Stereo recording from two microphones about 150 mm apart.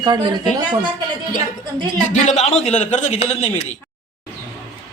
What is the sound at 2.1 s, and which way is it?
A man's voice, 55° left (ahead or behind).